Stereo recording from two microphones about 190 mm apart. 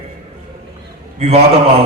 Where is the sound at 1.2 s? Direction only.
30° right (ahead or behind).